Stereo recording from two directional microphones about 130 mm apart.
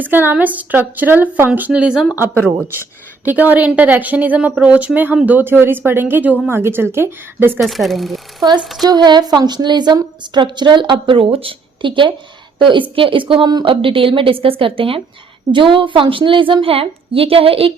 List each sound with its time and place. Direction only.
0.0 s speech: 15° right (ahead or behind)
2.1 s speech: 20° right (ahead or behind)
7.6 s speech: centre (ahead or behind)
8.8 s a woman's voice: 30° right (ahead or behind)